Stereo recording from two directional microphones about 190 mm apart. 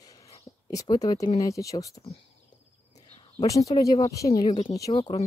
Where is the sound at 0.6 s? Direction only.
20° left (ahead or behind).